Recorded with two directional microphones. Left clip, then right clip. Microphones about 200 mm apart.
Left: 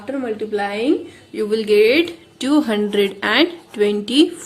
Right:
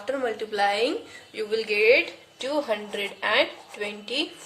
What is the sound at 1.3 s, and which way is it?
A woman's voice, 35° left (ahead or behind).